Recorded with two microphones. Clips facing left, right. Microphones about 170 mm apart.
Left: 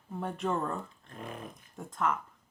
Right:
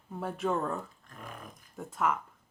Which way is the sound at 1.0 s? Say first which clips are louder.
Left 4 dB; 25° left (ahead or behind).